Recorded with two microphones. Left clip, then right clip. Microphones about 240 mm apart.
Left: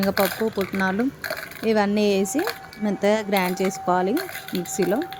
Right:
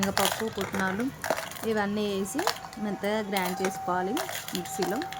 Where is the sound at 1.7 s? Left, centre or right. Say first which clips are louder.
Left 9 dB; left.